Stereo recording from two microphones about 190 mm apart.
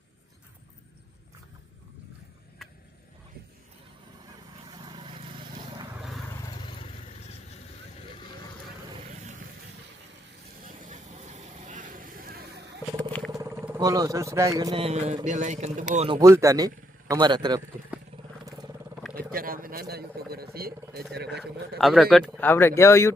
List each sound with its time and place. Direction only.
4.8 s vehicle: 25° right (ahead or behind)
10.7 s vehicle: 40° right (ahead or behind)
13.0 s vehicle: 5° left (ahead or behind)
13.3 s speech: 15° right (ahead or behind)
14.8 s a man's voice: 35° right (ahead or behind)
16.2 s a man's voice: 15° right (ahead or behind)
18.4 s vehicle: 20° right (ahead or behind)
19.1 s speech: 50° right (ahead or behind)
21.8 s a man's voice: centre (ahead or behind)
22.4 s speech: 10° left (ahead or behind)